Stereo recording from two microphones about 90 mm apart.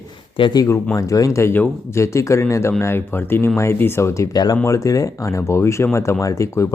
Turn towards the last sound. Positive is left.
turn(degrees=35)  # may be behind; listen again after turning